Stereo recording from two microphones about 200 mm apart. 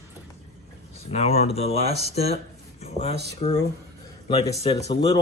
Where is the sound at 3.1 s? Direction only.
55° right (ahead or behind).